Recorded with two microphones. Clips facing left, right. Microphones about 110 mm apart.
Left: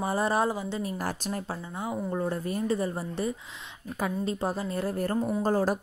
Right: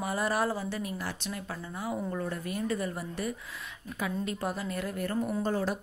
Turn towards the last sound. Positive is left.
turn(degrees=40)  # may be behind; listen again after turning